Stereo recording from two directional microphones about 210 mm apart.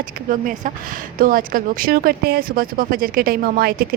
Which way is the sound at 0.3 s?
40° right (ahead or behind).